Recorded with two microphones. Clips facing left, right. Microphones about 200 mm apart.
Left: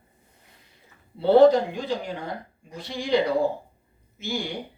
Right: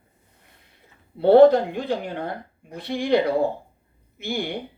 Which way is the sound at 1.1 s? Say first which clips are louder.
Right 3 dB; 55° right (ahead or behind).